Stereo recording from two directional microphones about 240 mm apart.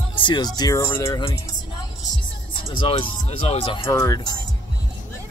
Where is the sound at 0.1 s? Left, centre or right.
Centre.